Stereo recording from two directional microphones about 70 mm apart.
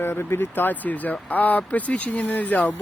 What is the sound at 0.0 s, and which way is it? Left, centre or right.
Speech, left.